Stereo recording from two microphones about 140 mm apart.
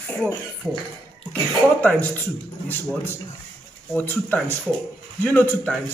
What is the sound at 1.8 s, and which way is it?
Speech, 10° left (ahead or behind).